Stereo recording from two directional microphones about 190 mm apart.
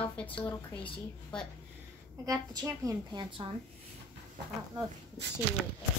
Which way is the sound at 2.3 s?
20° right (ahead or behind).